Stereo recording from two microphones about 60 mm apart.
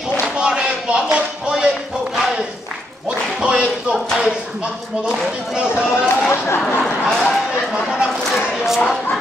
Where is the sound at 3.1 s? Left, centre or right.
Centre.